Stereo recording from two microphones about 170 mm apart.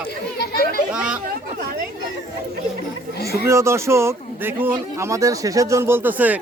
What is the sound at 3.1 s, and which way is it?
Chatter, 65° left (ahead or behind).